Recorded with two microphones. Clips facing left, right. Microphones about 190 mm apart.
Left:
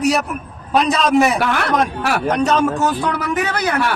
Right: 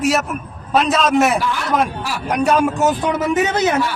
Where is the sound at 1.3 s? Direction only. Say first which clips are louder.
Left 1 dB; 65° left (ahead or behind).